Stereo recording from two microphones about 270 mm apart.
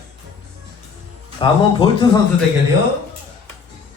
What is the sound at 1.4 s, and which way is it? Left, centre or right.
Speech, centre.